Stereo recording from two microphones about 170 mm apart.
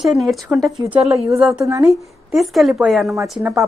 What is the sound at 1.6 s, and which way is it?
Speech, 15° right (ahead or behind).